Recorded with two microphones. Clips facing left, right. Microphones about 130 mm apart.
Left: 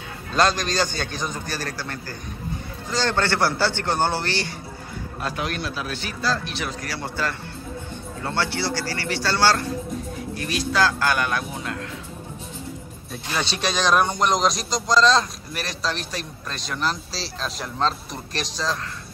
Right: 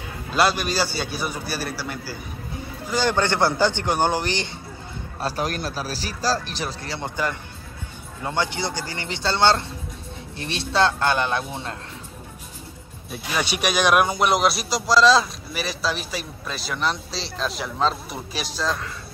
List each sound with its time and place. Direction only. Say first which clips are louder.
0.3 s a man's voice: even; 10° right (ahead or behind)
5.2 s a man's voice: right 2 dB; 40° right (ahead or behind)
13.1 s speech: right 2 dB; 10° right (ahead or behind)